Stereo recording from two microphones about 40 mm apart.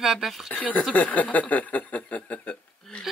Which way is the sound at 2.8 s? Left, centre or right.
Centre.